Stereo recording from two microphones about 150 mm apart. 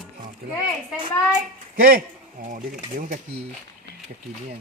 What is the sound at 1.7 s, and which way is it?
Speech, 75° right (ahead or behind).